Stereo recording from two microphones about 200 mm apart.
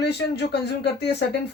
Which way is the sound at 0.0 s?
55° left (ahead or behind).